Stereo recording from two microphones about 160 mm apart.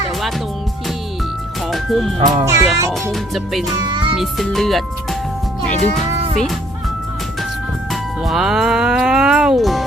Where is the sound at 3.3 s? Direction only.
Centre (ahead or behind).